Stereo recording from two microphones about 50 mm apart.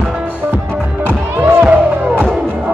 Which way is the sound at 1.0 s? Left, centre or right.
Right.